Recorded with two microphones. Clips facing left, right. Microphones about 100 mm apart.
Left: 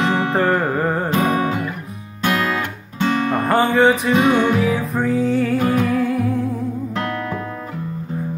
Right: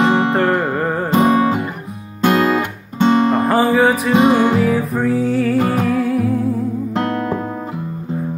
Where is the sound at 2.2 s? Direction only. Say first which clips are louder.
Right 6 dB; 20° right (ahead or behind).